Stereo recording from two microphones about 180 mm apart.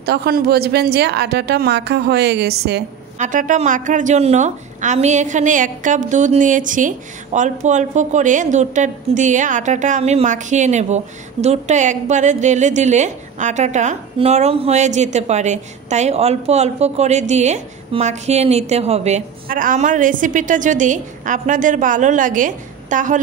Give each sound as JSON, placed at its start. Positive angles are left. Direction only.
{"t": 0.0, "sound": "a woman's voice", "side_deg": -60}
{"t": 3.2, "sound": "a woman's voice", "side_deg": -45}
{"t": 19.4, "sound": "a woman's voice", "side_deg": -50}